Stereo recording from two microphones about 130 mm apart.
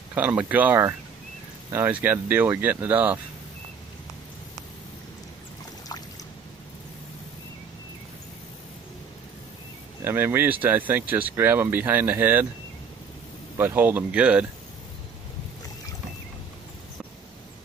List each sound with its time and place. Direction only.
0.1 s speech: 10° right (ahead or behind)
10.0 s speech: 15° right (ahead or behind)
13.6 s speech: 15° right (ahead or behind)